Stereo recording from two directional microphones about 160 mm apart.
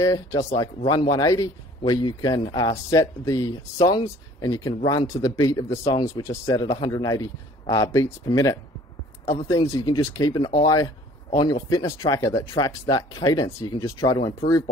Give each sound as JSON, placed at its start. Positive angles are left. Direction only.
{"t": 0.0, "sound": "speech", "side_deg": 20}
{"t": 9.2, "sound": "speech", "side_deg": 40}
{"t": 9.5, "sound": "speech", "side_deg": 20}